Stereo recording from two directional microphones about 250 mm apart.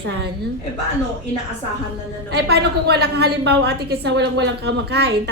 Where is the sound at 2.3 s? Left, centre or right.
Right.